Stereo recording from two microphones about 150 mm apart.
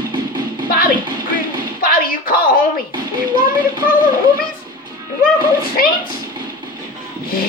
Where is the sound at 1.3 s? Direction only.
75° left (ahead or behind).